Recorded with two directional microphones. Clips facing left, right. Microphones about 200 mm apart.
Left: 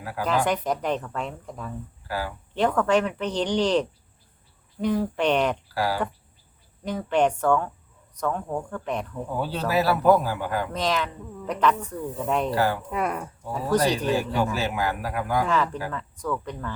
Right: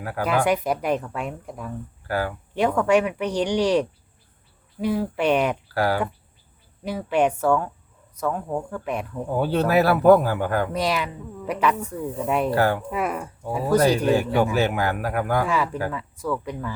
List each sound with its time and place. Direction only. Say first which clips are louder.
0.0 s speech: right 3 dB; 55° right (ahead or behind)
0.3 s speech: right 2 dB; 10° right (ahead or behind)
2.0 s a man's voice: right 5 dB; 55° right (ahead or behind)
2.6 s speech: right 2 dB; 10° right (ahead or behind)
5.7 s speech: right 4 dB; 55° right (ahead or behind)
6.8 s speech: right 1 dB; 10° right (ahead or behind)
9.4 s a man's voice: right 5 dB; 55° right (ahead or behind)
10.7 s speech: right 2 dB; 10° right (ahead or behind)
12.5 s speech: right 3 dB; 55° right (ahead or behind)
12.9 s speech: right 1 dB; 5° right (ahead or behind)
14.0 s a man's voice: right 4 dB; 55° right (ahead or behind)
15.4 s speech: right 1 dB; 10° right (ahead or behind)